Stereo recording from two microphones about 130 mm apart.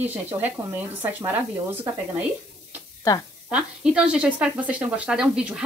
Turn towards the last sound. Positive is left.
turn(degrees=-5)  # may be behind; listen again after turning